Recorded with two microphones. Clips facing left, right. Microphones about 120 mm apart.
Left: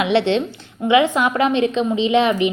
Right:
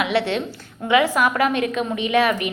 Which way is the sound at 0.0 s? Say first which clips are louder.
Left 4 dB; 25° left (ahead or behind).